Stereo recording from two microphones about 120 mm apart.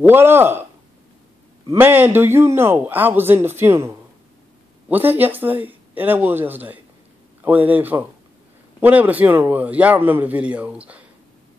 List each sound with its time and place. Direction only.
0.0 s speech: 20° right (ahead or behind)
1.8 s a man's voice: 15° right (ahead or behind)